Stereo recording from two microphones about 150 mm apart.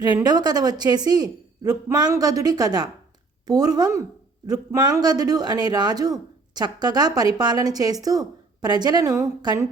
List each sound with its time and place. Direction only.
0.0 s a man's voice: 25° right (ahead or behind)